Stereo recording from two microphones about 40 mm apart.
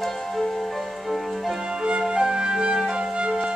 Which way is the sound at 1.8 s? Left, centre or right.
Right.